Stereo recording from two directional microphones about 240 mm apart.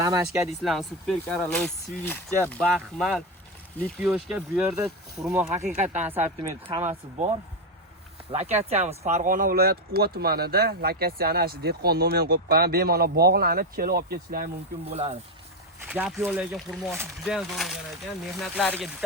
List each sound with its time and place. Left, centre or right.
0.0 s speech: centre
0.6 s speech: centre
5.8 s speech: right
6.1 s speech: centre
6.5 s speech: right
14.8 s speech: right
15.9 s speech: centre